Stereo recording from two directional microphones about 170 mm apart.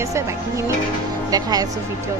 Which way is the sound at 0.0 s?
15° right (ahead or behind).